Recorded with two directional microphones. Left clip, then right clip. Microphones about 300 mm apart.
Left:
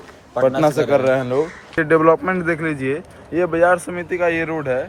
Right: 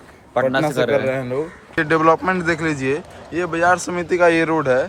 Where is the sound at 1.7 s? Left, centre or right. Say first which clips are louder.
Left 1 dB; centre.